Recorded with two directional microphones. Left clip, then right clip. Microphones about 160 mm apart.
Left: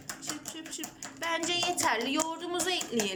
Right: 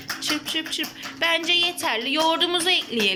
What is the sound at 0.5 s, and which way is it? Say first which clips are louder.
A woman's voice: right 14 dB; centre (ahead or behind).